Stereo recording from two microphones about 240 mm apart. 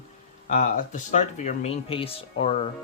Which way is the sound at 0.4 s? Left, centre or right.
Left.